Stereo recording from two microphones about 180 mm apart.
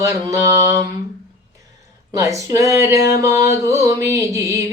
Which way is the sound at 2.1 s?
20° right (ahead or behind).